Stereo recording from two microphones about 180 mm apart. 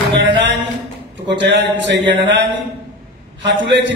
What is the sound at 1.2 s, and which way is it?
Speech, 75° right (ahead or behind).